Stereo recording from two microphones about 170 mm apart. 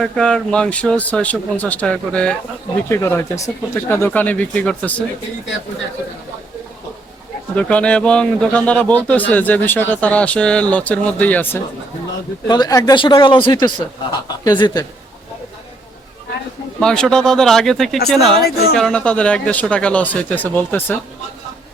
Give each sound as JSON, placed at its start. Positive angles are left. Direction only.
{"t": 0.0, "sound": "a man's voice", "side_deg": 5}
{"t": 7.5, "sound": "a man's voice", "side_deg": 5}
{"t": 12.5, "sound": "speech", "side_deg": 25}
{"t": 16.8, "sound": "speech", "side_deg": 5}
{"t": 18.4, "sound": "speech", "side_deg": 65}
{"t": 18.8, "sound": "a man's voice", "side_deg": 5}